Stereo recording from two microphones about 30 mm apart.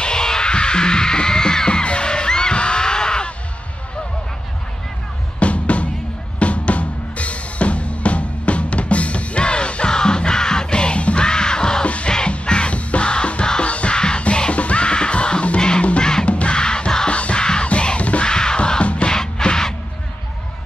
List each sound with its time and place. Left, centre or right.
0.0 s music: left
5.4 s music: left
11.2 s music: left
11.8 s music: left
14.2 s music: left
16.0 s music: left
16.3 s music: left
16.5 s music: left
17.1 s music: left
18.2 s music: left
18.8 s music: left
19.0 s music: left